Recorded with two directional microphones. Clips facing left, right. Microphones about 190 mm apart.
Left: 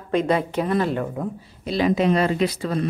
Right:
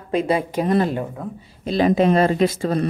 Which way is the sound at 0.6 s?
35° right (ahead or behind).